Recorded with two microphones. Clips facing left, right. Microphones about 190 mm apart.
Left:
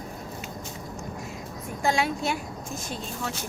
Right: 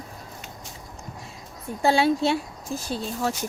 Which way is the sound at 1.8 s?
30° right (ahead or behind).